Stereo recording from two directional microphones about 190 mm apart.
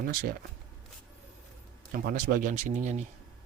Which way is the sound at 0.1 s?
50° right (ahead or behind).